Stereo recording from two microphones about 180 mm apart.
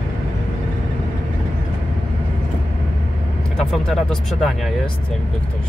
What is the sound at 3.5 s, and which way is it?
Speech, centre (ahead or behind).